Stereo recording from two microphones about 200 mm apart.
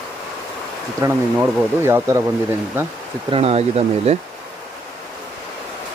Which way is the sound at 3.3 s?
30° right (ahead or behind).